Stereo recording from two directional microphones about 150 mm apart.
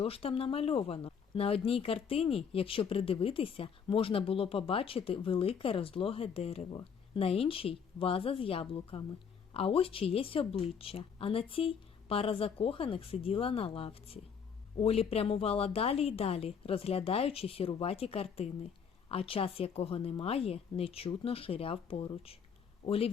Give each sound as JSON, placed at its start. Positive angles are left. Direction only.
{"t": 0.0, "sound": "a woman's voice", "side_deg": 40}